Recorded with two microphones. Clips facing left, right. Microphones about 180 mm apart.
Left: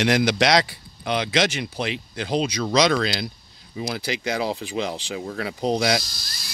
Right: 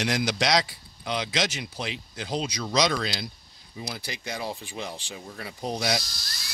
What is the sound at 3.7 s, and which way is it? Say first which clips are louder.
Speech: left 9 dB; 90° left.